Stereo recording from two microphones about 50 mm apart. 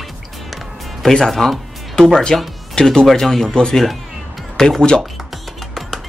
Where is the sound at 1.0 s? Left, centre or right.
Centre.